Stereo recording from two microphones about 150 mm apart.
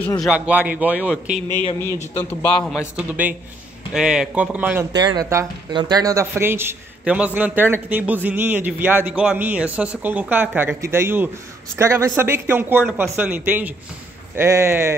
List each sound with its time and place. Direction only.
0.2 s a man's voice: 10° right (ahead or behind)
2.1 s a man's voice: 10° left (ahead or behind)
3.0 s a man's voice: 10° right (ahead or behind)
4.9 s a man's voice: 25° right (ahead or behind)